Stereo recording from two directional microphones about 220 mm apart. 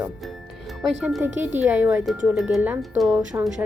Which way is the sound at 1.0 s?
10° right (ahead or behind).